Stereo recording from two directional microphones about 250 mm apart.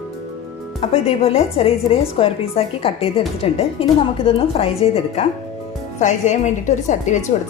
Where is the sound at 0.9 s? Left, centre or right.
Left.